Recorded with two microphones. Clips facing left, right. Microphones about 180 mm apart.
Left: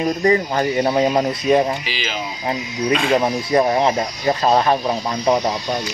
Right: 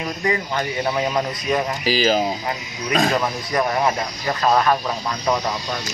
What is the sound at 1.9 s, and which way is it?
Speech, 40° right (ahead or behind).